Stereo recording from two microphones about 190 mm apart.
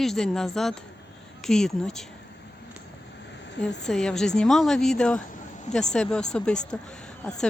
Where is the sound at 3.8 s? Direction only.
5° left (ahead or behind).